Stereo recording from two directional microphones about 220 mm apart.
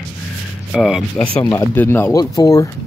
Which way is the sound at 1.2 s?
10° left (ahead or behind).